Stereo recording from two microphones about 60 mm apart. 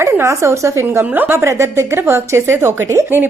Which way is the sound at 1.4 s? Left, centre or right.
Right.